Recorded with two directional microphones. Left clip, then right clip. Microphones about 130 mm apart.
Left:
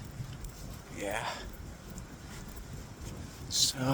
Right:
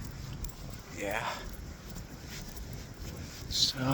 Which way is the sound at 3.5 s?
45° left (ahead or behind).